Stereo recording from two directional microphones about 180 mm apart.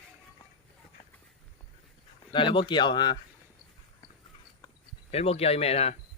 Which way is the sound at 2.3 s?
25° left (ahead or behind).